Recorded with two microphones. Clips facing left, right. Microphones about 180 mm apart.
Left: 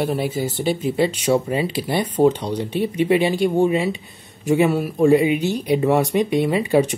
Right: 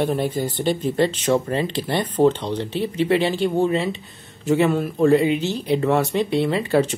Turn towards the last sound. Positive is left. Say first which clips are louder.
# left 2 dB
turn(degrees=15)  # may be behind; listen again after turning